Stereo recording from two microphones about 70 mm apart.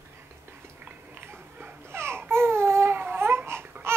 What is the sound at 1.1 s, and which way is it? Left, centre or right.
Baby cry, right.